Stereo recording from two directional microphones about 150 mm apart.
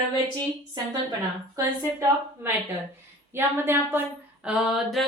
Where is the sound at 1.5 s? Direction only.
20° right (ahead or behind).